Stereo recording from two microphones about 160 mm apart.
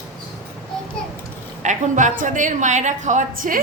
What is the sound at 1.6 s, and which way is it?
A woman's voice, 50° right (ahead or behind).